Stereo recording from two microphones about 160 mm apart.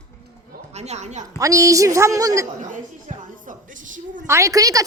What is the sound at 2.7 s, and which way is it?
Music, 55° right (ahead or behind).